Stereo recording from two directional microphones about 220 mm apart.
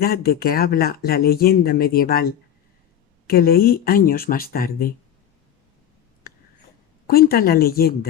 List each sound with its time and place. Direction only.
0.0 s speech: 45° left (ahead or behind)
7.1 s speech: 45° left (ahead or behind)